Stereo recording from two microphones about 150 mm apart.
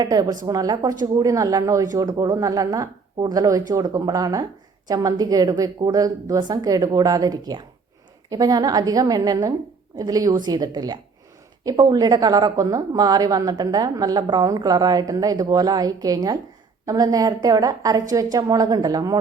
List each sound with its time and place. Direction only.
0.0 s a woman's voice: 25° right (ahead or behind)